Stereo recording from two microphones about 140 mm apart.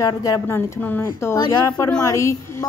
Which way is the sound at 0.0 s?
25° left (ahead or behind).